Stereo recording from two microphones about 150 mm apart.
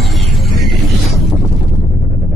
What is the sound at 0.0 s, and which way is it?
Music, centre (ahead or behind).